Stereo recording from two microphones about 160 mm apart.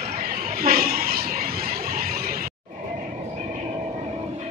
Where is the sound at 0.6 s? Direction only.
70° right (ahead or behind).